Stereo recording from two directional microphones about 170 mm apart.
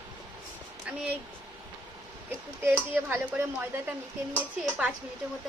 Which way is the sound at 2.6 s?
10° right (ahead or behind).